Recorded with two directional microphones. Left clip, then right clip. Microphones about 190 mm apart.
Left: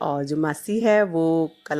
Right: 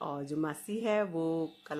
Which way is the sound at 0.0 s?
30° left (ahead or behind).